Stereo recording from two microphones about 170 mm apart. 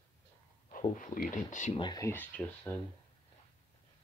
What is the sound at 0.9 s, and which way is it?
Speech, 50° left (ahead or behind).